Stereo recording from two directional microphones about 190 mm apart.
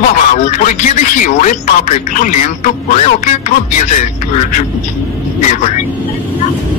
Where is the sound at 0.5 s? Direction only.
40° left (ahead or behind).